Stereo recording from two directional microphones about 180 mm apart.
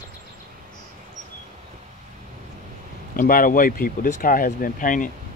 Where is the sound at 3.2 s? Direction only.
50° left (ahead or behind).